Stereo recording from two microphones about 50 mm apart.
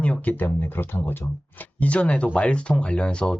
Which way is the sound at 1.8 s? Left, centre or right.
Left.